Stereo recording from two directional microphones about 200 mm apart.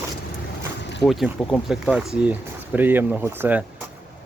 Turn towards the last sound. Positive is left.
turn(degrees=-10)  # may be behind; listen again after turning